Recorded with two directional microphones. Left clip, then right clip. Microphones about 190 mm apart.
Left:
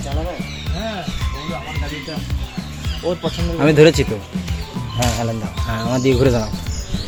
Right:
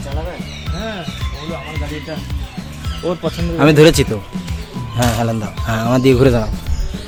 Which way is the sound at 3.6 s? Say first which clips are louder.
Right 2 dB; 30° right (ahead or behind).